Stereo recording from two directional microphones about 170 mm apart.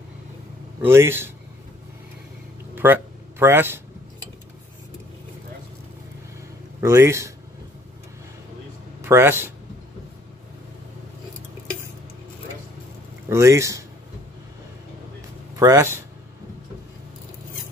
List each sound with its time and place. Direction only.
0.8 s speech: 15° right (ahead or behind)
2.7 s speech: 10° right (ahead or behind)
6.8 s speech: 20° right (ahead or behind)
9.0 s speech: 15° right (ahead or behind)
13.3 s speech: 15° right (ahead or behind)
15.5 s speech: 20° right (ahead or behind)